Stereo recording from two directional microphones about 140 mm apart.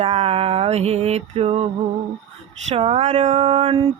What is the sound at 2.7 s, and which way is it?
Speech, 50° right (ahead or behind).